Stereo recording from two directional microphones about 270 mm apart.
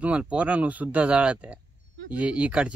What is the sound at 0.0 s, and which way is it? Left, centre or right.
Speech, centre.